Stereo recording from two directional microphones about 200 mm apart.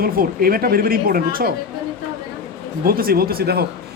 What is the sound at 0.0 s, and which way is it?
A man's voice, 50° right (ahead or behind).